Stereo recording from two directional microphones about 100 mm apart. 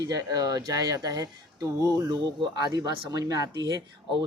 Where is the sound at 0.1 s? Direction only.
40° right (ahead or behind).